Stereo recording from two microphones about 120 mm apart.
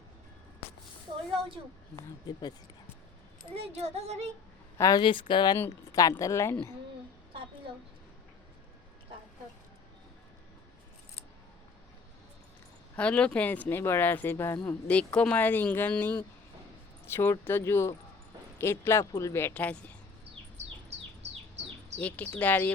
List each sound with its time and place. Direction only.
3.5 s a sound: 55° right (ahead or behind)
4.8 s speech: 30° left (ahead or behind)
5.0 s speech: 45° left (ahead or behind)
5.5 s speech: 25° left (ahead or behind)
13.0 s speech: 10° left (ahead or behind)
21.9 s speech: 15° left (ahead or behind)